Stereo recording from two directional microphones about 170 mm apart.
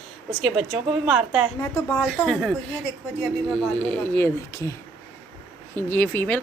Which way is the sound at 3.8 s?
10° left (ahead or behind).